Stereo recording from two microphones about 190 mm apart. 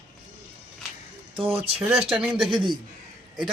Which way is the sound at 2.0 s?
5° right (ahead or behind).